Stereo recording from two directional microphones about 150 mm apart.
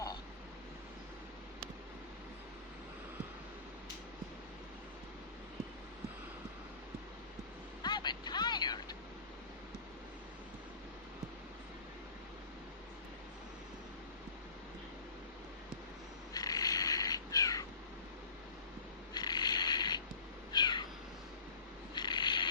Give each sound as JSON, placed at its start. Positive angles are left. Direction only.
{"t": 7.8, "sound": "vehicle", "side_deg": 30}
{"t": 16.3, "sound": "cat", "side_deg": 25}
{"t": 19.1, "sound": "mechanisms", "side_deg": 25}
{"t": 20.5, "sound": "cat", "side_deg": 30}
{"t": 21.9, "sound": "mechanisms", "side_deg": 30}